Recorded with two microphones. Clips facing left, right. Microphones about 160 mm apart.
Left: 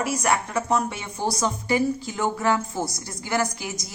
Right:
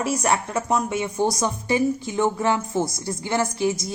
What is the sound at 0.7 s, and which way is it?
A woman's voice, 15° right (ahead or behind).